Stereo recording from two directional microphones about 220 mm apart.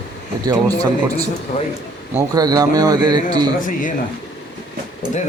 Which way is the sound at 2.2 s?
15° right (ahead or behind).